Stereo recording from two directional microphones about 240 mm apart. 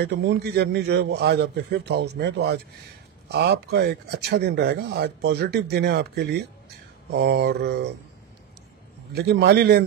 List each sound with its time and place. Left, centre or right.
0.0 s speech: right
9.1 s a man's voice: right